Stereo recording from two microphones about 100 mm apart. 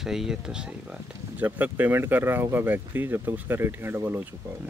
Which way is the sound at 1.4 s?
20° right (ahead or behind).